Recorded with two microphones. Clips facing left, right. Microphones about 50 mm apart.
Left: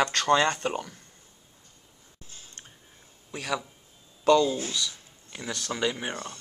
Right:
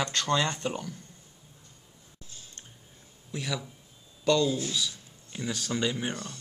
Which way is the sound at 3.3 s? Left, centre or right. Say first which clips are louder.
Left 3 dB; left.